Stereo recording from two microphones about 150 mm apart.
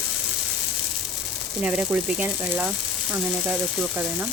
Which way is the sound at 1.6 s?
5° right (ahead or behind).